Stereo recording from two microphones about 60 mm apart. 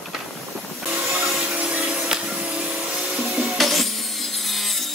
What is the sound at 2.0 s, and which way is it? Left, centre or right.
Music, centre.